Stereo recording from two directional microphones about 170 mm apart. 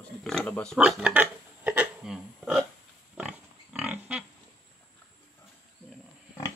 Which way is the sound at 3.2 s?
10° right (ahead or behind).